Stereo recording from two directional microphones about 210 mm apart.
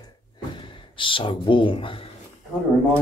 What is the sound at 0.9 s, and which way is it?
Speech, 25° left (ahead or behind).